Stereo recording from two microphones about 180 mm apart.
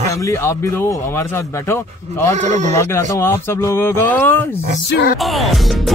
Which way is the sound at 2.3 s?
40° right (ahead or behind).